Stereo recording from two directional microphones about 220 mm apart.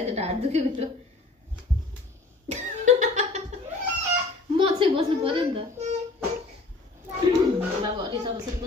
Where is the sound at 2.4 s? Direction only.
30° right (ahead or behind).